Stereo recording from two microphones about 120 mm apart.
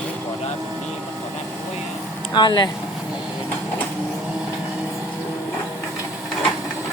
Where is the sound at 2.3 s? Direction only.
40° left (ahead or behind).